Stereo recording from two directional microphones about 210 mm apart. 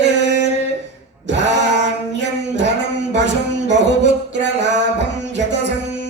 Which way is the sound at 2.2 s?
55° right (ahead or behind).